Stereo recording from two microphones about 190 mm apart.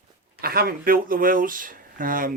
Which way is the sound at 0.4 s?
50° right (ahead or behind).